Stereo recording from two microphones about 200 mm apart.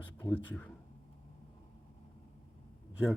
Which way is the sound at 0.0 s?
10° left (ahead or behind).